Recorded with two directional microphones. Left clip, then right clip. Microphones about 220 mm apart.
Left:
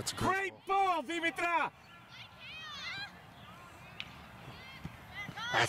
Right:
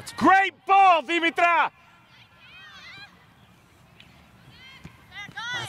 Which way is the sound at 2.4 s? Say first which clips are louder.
Left 1 dB; centre (ahead or behind).